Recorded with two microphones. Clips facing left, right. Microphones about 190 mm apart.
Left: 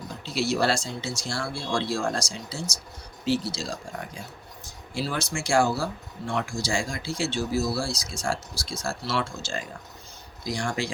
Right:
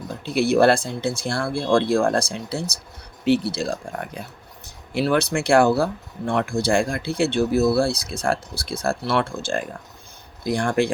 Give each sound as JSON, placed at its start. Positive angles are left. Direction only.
{"t": 0.1, "sound": "speech", "side_deg": -55}